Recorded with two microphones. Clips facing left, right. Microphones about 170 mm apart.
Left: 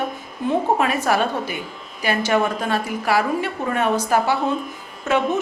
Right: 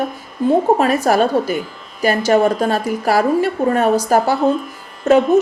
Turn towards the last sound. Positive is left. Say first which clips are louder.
# right 8 dB
turn(degrees=-40)  # may be behind; listen again after turning